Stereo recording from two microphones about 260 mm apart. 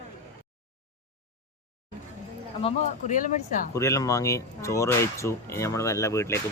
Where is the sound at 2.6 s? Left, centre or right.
Left.